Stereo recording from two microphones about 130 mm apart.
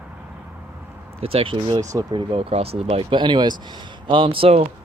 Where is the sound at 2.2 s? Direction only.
45° right (ahead or behind).